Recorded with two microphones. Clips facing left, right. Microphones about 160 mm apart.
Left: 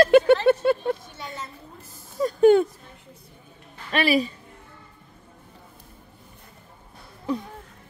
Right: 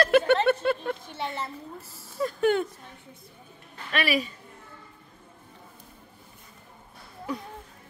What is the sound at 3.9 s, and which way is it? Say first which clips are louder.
Speech: left 5 dB; 30° left (ahead or behind).